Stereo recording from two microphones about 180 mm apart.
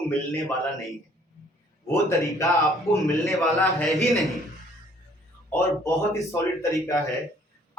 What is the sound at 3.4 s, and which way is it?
Speech, centre (ahead or behind).